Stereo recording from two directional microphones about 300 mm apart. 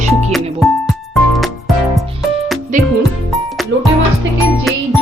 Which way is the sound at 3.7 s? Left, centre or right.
Right.